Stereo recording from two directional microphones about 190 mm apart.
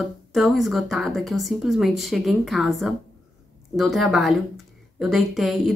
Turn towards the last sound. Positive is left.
turn(degrees=0)  # may be behind; listen again after turning